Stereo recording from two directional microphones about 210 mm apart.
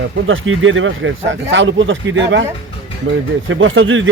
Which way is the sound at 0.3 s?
70° right (ahead or behind).